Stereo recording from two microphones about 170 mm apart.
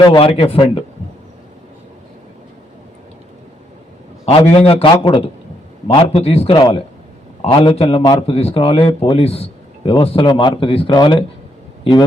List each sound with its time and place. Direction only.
0.0 s a man's voice: 30° left (ahead or behind)
4.3 s a man's voice: 35° left (ahead or behind)